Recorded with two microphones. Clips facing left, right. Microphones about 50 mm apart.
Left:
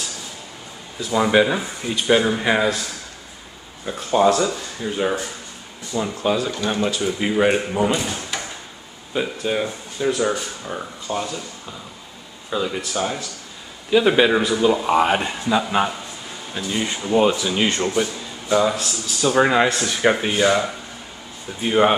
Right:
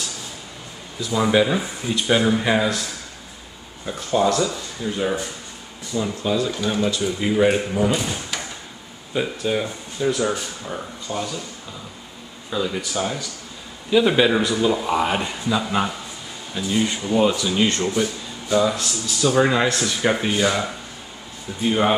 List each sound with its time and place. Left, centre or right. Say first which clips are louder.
1.1 s speech: left 1 dB; centre
4.1 s speech: left 3 dB; centre
6.2 s speech: left 2 dB; centre
9.1 s speech: even; centre
11.1 s speech: left 2 dB; left
12.4 s speech: left 1 dB; centre